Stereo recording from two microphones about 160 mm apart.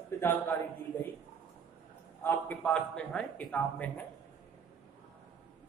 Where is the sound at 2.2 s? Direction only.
10° left (ahead or behind).